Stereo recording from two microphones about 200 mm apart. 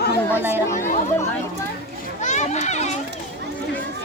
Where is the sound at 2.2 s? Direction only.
35° left (ahead or behind).